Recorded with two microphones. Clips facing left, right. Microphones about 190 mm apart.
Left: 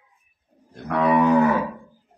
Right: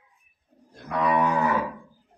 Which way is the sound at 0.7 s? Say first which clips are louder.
Left 5 dB; 60° left (ahead or behind).